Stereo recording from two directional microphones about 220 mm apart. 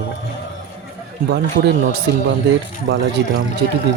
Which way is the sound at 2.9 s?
55° right (ahead or behind).